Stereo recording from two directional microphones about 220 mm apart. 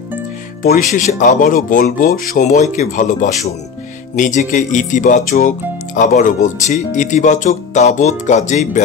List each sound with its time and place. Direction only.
0.6 s speech: 40° left (ahead or behind)